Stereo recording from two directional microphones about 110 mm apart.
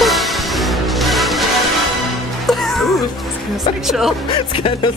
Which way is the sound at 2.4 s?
Centre (ahead or behind).